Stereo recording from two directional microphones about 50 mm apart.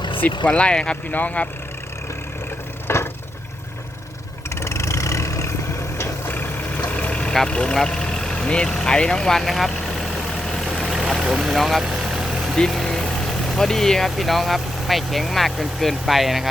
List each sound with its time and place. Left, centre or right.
0.4 s speech: left
1.1 s speech: left
2.8 s vehicle: left
4.4 s vehicle: left
6.2 s vehicle: left
6.9 s vehicle: left
7.4 s speech: centre
7.8 s vehicle: centre
11.2 s speech: centre
12.0 s vehicle: centre
12.5 s vehicle: centre
13.5 s speech: centre